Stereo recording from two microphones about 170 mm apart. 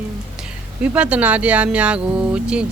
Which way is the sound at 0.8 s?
10° right (ahead or behind).